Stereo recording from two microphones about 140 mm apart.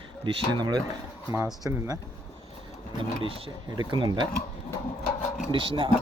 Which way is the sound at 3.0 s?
40° right (ahead or behind).